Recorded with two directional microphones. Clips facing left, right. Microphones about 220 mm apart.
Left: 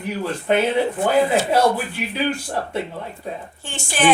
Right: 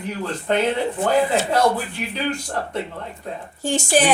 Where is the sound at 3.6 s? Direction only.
40° right (ahead or behind).